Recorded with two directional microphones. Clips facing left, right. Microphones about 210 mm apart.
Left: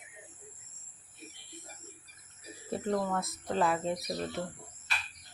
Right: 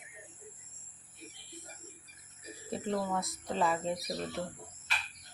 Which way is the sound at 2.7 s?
Centre (ahead or behind).